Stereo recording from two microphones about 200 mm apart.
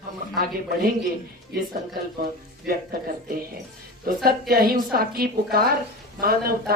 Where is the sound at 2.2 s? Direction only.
50° right (ahead or behind).